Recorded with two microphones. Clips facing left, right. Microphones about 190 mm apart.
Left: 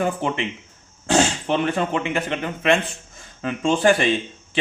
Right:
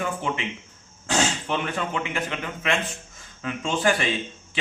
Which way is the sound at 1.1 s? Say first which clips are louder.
Left 5 dB; 35° left (ahead or behind).